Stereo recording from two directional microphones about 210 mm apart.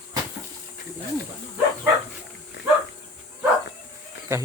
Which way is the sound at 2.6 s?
55° left (ahead or behind).